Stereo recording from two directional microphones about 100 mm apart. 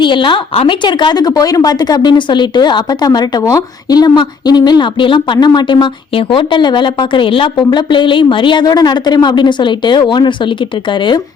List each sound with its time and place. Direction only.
0.0 s a woman's voice: 55° left (ahead or behind)
0.8 s speech: 50° left (ahead or behind)